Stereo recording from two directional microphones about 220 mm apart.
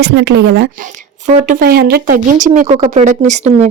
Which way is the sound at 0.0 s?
50° right (ahead or behind).